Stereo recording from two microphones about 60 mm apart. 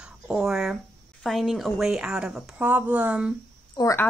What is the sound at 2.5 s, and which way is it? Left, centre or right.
Speech, right.